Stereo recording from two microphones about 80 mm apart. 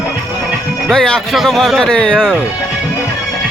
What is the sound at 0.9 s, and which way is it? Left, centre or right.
A man's voice, centre.